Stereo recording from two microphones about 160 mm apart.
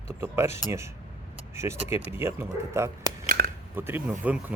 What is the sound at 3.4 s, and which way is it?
Biting, 70° right (ahead or behind).